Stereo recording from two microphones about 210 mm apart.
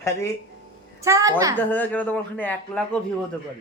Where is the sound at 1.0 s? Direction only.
15° right (ahead or behind).